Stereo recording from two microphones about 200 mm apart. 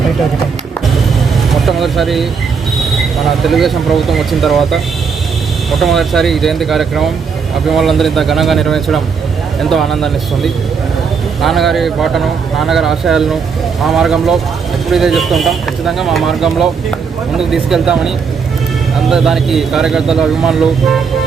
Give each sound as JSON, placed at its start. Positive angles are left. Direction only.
{"t": 1.6, "sound": "speech", "side_deg": 0}
{"t": 3.2, "sound": "speech", "side_deg": 0}